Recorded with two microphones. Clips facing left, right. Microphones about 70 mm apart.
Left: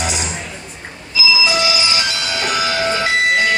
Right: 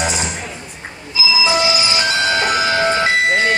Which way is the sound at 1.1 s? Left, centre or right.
Right.